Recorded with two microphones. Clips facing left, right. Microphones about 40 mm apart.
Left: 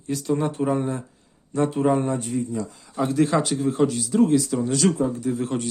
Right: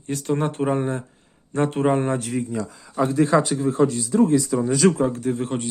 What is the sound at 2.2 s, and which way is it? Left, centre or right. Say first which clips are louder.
Speech: right 1 dB; right.